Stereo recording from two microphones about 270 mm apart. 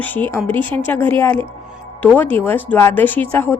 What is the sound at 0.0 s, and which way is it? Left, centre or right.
A woman's voice, centre.